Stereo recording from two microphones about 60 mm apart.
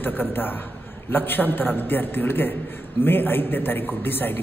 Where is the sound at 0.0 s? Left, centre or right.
Left.